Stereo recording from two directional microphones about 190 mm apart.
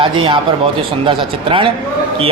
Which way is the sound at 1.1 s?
25° right (ahead or behind).